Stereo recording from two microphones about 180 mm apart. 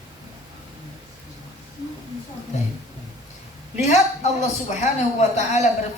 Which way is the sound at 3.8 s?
40° left (ahead or behind).